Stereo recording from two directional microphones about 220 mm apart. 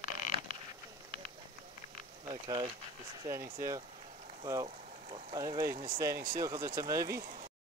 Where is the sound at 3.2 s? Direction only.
15° right (ahead or behind).